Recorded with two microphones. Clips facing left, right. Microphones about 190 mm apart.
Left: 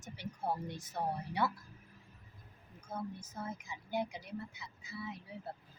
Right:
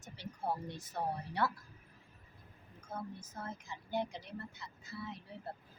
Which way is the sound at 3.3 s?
10° left (ahead or behind).